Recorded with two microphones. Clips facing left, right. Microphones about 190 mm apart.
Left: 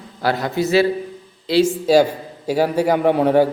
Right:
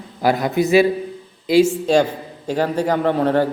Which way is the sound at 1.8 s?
5° left (ahead or behind).